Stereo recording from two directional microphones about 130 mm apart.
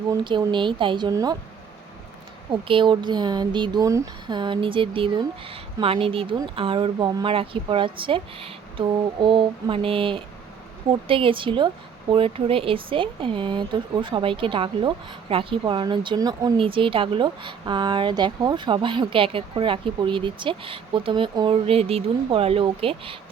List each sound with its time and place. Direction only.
0.3 s a woman's voice: 40° right (ahead or behind)
2.5 s a woman's voice: 40° right (ahead or behind)
16.6 s a woman's voice: 45° right (ahead or behind)